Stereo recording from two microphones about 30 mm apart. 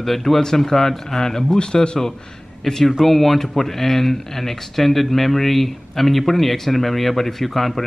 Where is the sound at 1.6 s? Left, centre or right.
Left.